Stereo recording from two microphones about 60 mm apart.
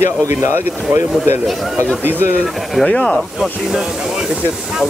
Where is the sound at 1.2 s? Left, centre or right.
Right.